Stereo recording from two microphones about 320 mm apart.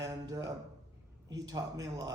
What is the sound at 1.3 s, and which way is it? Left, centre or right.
Speech, centre.